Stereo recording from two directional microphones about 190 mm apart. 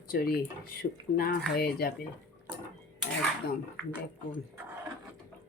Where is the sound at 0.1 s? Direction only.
50° left (ahead or behind).